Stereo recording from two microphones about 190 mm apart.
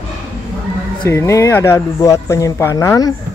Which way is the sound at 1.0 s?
15° left (ahead or behind).